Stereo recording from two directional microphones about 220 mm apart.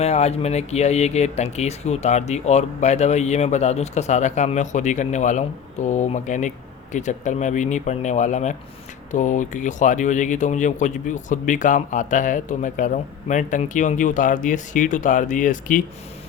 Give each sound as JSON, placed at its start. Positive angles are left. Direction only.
{"t": 0.0, "sound": "speech", "side_deg": 30}